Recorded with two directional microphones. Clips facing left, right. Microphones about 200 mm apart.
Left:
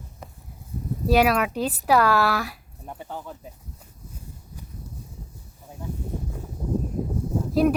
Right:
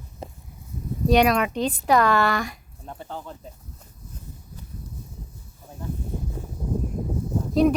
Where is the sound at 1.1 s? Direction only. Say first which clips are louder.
Right 1 dB; 5° left (ahead or behind).